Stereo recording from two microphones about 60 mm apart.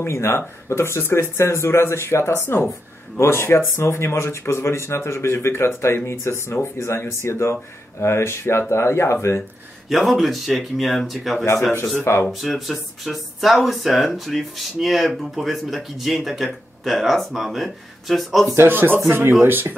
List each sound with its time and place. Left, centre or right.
0.0 s speech: left
9.8 s speech: centre
12.0 s speech: left
12.3 s speech: centre
18.4 s speech: right
18.7 s speech: right